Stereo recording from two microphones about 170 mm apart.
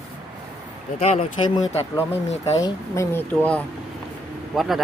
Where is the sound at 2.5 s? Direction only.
20° left (ahead or behind).